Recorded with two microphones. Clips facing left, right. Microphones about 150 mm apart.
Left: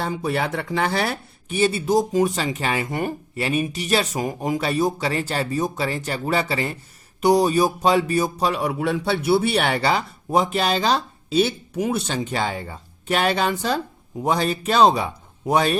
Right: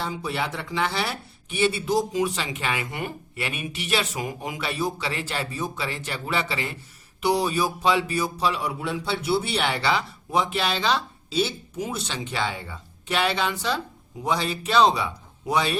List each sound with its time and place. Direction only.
0.0 s speech: 50° left (ahead or behind)